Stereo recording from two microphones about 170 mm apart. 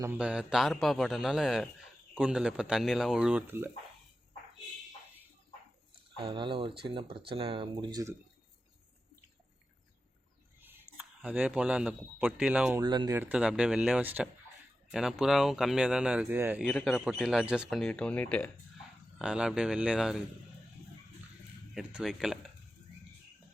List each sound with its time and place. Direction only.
0.0 s a man's voice: 10° right (ahead or behind)
6.1 s speech: 30° right (ahead or behind)
10.6 s speech: 10° right (ahead or behind)
12.8 s speech: 25° right (ahead or behind)
13.1 s a man's voice: 10° right (ahead or behind)
16.6 s a man's voice: centre (ahead or behind)
19.2 s a man's voice: 5° right (ahead or behind)
21.8 s a man's voice: 5° right (ahead or behind)